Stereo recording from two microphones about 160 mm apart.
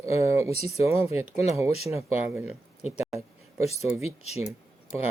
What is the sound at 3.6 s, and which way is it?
Speech, 40° left (ahead or behind).